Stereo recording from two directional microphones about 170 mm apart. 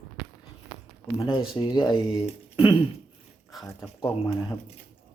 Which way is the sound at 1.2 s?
30° left (ahead or behind).